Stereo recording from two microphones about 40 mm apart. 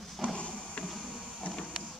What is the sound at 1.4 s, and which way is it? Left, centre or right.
Printer, left.